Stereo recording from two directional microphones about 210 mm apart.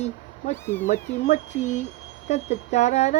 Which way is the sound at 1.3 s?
35° left (ahead or behind).